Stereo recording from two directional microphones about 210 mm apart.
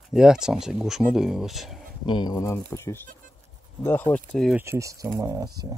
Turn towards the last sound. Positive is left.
turn(degrees=-20)  # may be behind; listen again after turning